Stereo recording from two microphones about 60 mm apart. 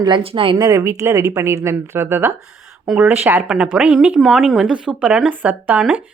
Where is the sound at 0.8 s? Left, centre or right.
Right.